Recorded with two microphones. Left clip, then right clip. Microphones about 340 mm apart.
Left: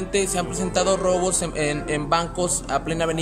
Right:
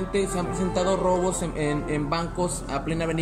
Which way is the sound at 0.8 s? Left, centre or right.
Left.